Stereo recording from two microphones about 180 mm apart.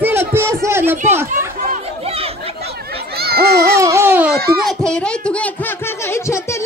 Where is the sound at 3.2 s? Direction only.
60° right (ahead or behind).